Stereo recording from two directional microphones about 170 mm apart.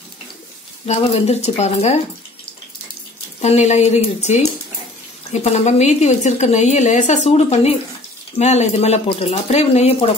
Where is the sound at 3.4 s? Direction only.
40° left (ahead or behind).